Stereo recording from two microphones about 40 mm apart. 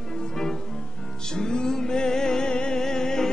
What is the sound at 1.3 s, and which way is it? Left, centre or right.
Music, centre.